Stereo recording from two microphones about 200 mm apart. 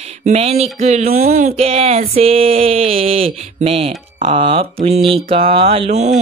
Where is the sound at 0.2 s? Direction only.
35° right (ahead or behind).